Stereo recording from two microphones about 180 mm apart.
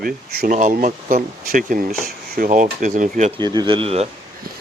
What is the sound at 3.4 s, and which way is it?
Speech, 25° right (ahead or behind).